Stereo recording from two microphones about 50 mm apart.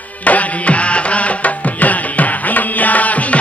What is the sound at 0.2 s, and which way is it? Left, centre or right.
Music, left.